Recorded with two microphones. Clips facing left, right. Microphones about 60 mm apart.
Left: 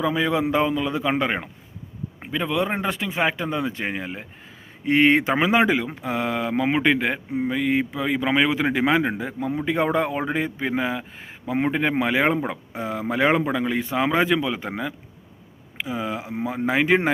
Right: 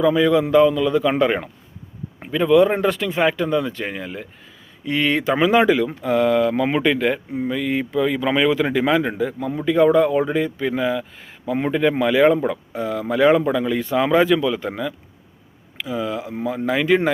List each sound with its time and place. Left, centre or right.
0.0 s speech: centre
4.9 s speech: left